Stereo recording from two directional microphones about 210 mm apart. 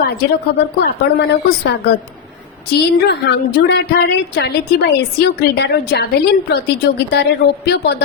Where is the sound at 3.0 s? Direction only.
55° left (ahead or behind).